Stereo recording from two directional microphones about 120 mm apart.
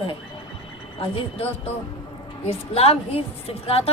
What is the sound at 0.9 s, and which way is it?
A woman's voice, 55° left (ahead or behind).